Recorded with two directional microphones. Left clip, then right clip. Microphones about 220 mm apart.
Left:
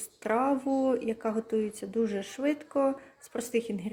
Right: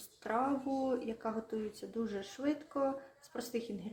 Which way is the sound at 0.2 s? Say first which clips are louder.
Left 7 dB; 25° left (ahead or behind).